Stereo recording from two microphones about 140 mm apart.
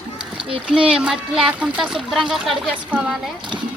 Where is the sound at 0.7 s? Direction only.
5° right (ahead or behind).